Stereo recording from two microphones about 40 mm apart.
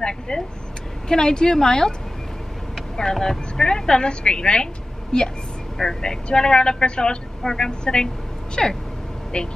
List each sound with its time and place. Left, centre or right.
0.3 s a woman's voice: centre
3.0 s a woman's voice: centre
9.3 s a woman's voice: left